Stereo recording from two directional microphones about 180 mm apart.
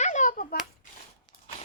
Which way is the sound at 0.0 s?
40° left (ahead or behind).